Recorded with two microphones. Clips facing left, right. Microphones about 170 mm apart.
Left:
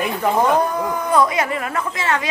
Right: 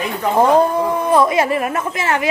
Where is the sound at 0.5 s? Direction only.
30° right (ahead or behind).